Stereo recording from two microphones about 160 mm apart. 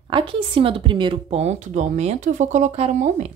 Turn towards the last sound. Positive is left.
turn(degrees=-45)  # may be behind; listen again after turning